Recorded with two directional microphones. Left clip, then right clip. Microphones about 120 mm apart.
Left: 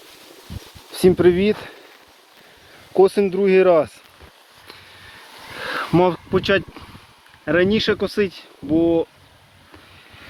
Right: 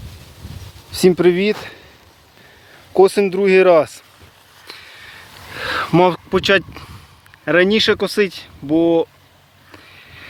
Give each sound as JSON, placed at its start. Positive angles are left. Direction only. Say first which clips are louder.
{"t": 0.9, "sound": "speech", "louder": "right 1 dB", "side_deg": -50}
{"t": 2.9, "sound": "speech", "louder": "right 3 dB", "side_deg": -55}
{"t": 4.7, "sound": "vehicle", "louder": "right 6 dB", "side_deg": -45}
{"t": 5.5, "sound": "speech", "louder": "right 4 dB", "side_deg": -55}
{"t": 7.4, "sound": "speech", "louder": "right 4 dB", "side_deg": -55}
{"t": 7.7, "sound": "speech", "louder": "right 4 dB", "side_deg": -90}